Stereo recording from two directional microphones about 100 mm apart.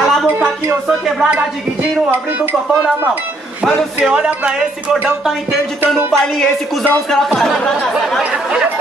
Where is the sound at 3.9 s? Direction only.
10° right (ahead or behind).